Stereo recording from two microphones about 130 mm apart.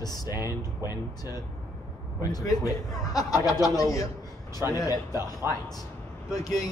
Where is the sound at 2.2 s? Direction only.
30° left (ahead or behind).